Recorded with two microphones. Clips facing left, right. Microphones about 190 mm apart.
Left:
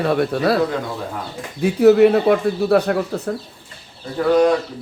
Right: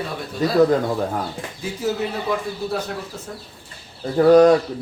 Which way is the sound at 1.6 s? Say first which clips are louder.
Left 13 dB; 65° left (ahead or behind).